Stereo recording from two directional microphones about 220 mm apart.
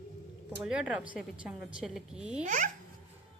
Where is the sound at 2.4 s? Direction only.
35° right (ahead or behind).